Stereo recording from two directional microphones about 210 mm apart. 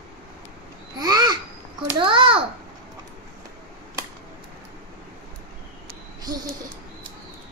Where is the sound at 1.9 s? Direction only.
25° right (ahead or behind).